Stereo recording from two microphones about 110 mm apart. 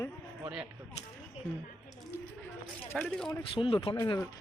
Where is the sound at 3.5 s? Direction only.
55° left (ahead or behind).